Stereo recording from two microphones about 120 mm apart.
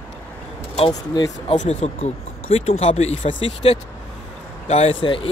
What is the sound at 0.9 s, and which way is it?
Speech, 30° left (ahead or behind).